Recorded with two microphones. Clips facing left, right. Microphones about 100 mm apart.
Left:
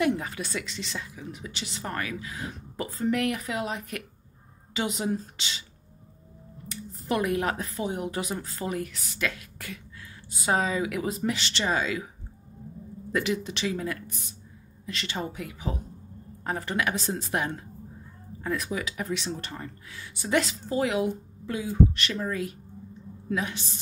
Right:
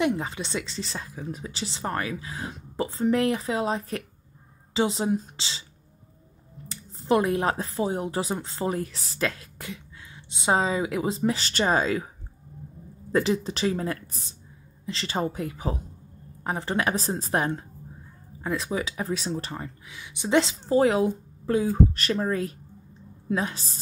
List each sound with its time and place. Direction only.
0.2 s speech: 25° right (ahead or behind)
6.7 s speech: 30° right (ahead or behind)
13.1 s speech: 30° right (ahead or behind)
19.6 s speech: 15° right (ahead or behind); by 23.8 s 35° right (ahead or behind)